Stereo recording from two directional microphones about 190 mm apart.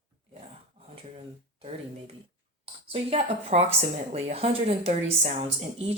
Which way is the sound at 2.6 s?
30° right (ahead or behind).